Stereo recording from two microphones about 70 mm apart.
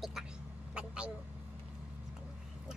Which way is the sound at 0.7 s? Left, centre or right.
Centre.